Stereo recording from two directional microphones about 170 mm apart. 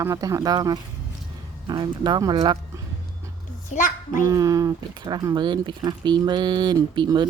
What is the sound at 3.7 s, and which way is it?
Speech, 50° left (ahead or behind).